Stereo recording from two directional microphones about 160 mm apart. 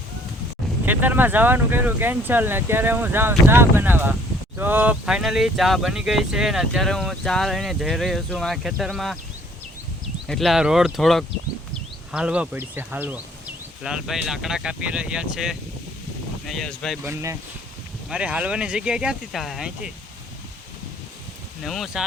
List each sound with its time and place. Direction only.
0.9 s speech: 10° right (ahead or behind)
10.2 s speech: centre (ahead or behind)
17.0 s speech: 15° right (ahead or behind)
21.6 s speech: centre (ahead or behind)